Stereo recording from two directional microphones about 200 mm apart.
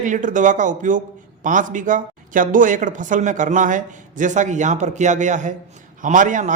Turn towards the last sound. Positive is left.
turn(degrees=-40)  # may be behind; listen again after turning